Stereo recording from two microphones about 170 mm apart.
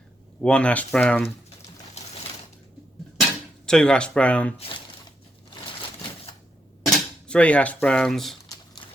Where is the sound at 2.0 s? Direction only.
40° left (ahead or behind).